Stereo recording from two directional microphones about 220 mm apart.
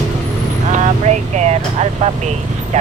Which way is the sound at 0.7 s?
35° right (ahead or behind).